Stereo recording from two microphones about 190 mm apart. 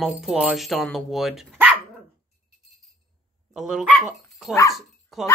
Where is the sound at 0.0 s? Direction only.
5° right (ahead or behind).